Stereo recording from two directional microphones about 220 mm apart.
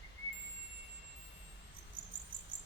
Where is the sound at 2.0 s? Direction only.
20° right (ahead or behind).